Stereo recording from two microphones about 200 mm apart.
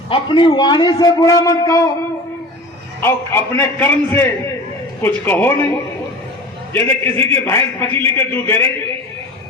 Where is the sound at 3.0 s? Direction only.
10° left (ahead or behind).